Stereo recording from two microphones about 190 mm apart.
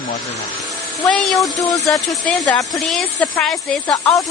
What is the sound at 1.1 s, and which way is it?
Speech, centre (ahead or behind).